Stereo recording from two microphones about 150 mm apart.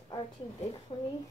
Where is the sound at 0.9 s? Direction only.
35° left (ahead or behind).